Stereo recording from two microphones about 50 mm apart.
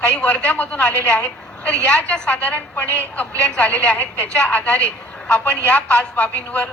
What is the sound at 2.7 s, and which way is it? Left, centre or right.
A woman's voice, left.